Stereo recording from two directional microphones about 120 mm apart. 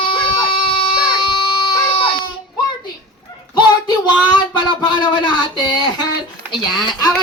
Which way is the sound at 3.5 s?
40° left (ahead or behind).